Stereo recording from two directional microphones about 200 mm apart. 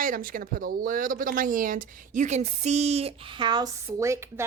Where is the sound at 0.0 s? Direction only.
45° right (ahead or behind).